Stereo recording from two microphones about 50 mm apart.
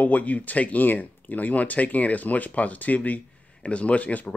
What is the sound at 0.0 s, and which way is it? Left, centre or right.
Speech, left.